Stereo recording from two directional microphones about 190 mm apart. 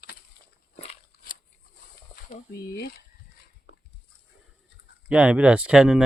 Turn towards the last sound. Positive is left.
turn(degrees=0)  # may be behind; listen again after turning